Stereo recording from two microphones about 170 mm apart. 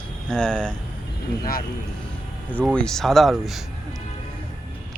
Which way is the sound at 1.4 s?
55° left (ahead or behind).